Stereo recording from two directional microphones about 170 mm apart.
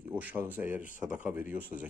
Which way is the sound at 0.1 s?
10° right (ahead or behind).